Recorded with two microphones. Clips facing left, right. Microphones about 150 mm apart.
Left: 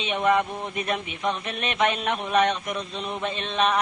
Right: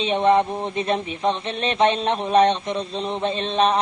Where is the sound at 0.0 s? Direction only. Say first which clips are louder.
Right 5 dB; 30° right (ahead or behind).